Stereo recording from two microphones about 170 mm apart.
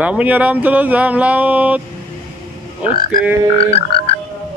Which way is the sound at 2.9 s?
60° left (ahead or behind).